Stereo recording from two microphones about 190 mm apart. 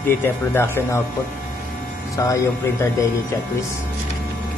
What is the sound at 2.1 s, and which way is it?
Speech, 15° left (ahead or behind).